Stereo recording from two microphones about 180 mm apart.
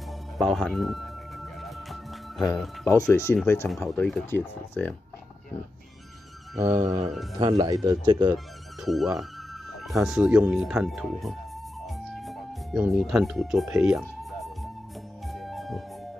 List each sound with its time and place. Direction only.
0.4 s music: 5° left (ahead or behind)
2.9 s speech: 15° left (ahead or behind)
7.3 s speech: 25° right (ahead or behind)
8.8 s speech: centre (ahead or behind)
11.8 s music: centre (ahead or behind)